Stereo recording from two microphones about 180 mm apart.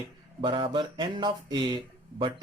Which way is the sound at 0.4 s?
25° right (ahead or behind).